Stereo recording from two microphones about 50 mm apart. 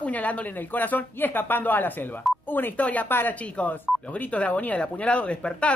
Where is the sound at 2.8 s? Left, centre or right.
Left.